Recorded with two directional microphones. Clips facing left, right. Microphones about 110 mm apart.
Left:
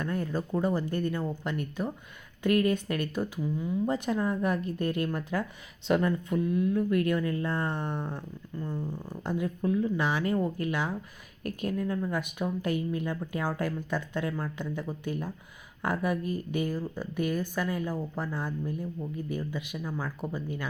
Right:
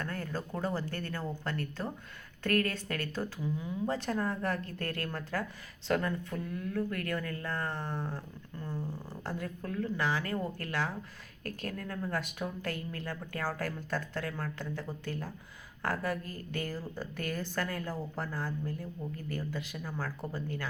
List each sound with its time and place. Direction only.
0.0 s speech: 15° left (ahead or behind)
3.4 s speech: centre (ahead or behind)
3.8 s speech: 15° left (ahead or behind)